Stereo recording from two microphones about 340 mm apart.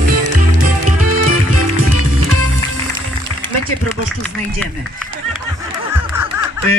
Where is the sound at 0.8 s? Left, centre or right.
Right.